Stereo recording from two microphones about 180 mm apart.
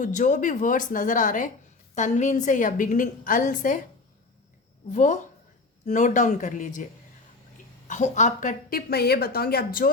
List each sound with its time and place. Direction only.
0.0 s a woman's voice: 45° left (ahead or behind)
4.9 s a woman's voice: 45° left (ahead or behind)
7.9 s a woman's voice: 40° left (ahead or behind)